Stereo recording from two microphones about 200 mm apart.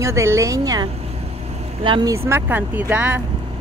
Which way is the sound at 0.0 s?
15° right (ahead or behind).